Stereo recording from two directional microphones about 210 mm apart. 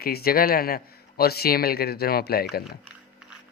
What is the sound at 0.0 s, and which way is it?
Speech, 45° left (ahead or behind).